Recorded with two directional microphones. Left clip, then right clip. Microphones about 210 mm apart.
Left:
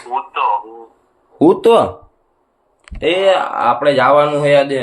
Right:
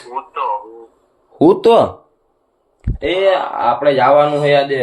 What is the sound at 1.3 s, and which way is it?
Speech, 5° right (ahead or behind).